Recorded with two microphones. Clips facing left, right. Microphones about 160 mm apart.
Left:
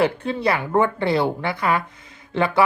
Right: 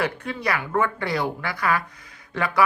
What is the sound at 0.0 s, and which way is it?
A woman's voice, 30° left (ahead or behind).